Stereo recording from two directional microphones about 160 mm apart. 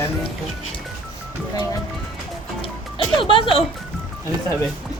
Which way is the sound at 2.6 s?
35° left (ahead or behind).